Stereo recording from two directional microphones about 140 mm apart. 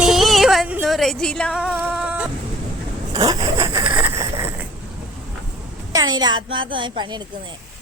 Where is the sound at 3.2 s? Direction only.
25° right (ahead or behind).